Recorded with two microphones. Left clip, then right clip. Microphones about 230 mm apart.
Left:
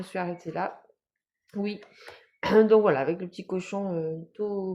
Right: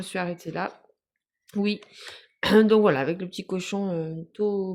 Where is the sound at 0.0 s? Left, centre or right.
Right.